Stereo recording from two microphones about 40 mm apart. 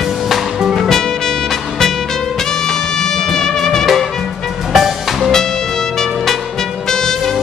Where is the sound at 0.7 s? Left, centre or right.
Centre.